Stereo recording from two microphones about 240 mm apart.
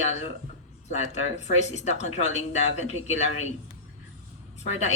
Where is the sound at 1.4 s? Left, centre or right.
Left.